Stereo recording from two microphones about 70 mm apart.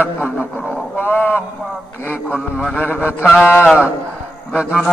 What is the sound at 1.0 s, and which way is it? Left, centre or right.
Livestock, left.